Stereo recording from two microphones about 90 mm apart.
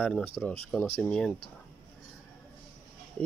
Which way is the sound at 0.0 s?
15° left (ahead or behind).